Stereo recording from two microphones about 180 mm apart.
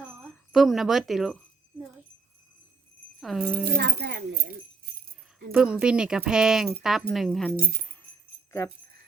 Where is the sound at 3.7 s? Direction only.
60° right (ahead or behind).